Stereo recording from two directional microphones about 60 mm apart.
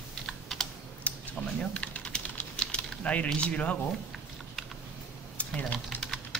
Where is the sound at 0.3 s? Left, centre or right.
Centre.